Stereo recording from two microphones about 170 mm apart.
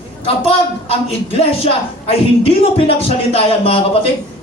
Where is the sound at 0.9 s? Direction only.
35° left (ahead or behind).